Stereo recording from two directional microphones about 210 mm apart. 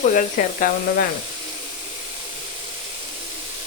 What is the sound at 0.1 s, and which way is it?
Speech, 40° left (ahead or behind).